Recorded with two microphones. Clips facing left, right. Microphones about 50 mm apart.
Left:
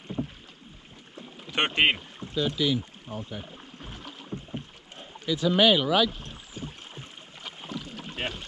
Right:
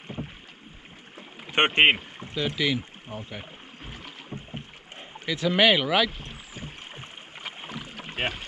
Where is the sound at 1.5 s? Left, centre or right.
Right.